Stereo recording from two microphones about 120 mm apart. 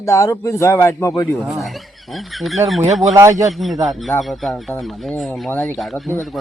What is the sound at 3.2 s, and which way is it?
Speech, 25° right (ahead or behind).